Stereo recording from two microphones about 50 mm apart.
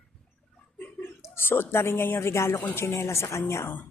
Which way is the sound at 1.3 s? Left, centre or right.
Left.